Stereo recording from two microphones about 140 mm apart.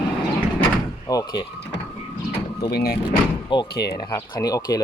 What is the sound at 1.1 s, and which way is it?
Speech, 30° left (ahead or behind).